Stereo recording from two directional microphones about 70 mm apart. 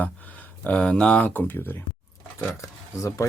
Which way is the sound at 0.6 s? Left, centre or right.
Centre.